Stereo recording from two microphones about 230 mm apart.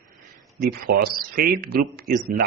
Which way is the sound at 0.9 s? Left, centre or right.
Right.